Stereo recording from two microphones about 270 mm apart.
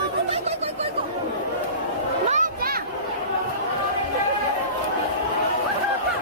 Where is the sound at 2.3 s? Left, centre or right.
Right.